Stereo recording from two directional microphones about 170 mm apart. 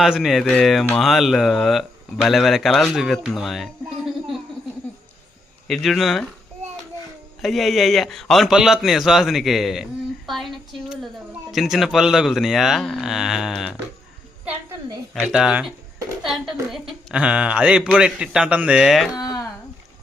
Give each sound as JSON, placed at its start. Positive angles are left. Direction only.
{"t": 0.0, "sound": "speech", "side_deg": 0}
{"t": 5.6, "sound": "speech", "side_deg": 0}
{"t": 7.4, "sound": "speech", "side_deg": 0}
{"t": 14.4, "sound": "a sound", "side_deg": -15}
{"t": 15.3, "sound": "speech", "side_deg": -5}